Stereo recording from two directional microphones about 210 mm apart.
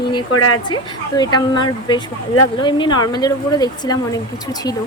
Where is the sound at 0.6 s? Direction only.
20° left (ahead or behind).